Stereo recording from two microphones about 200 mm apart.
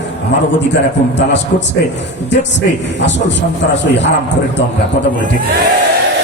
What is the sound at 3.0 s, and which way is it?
A man's voice, 65° left (ahead or behind).